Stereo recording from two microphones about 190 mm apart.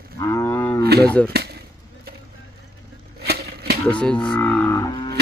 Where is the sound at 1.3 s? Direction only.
55° right (ahead or behind).